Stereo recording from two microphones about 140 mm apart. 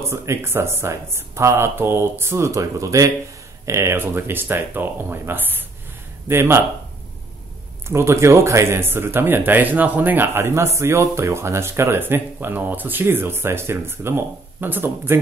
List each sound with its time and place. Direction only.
0.0 s speech: 20° right (ahead or behind)
7.9 s speech: 20° right (ahead or behind)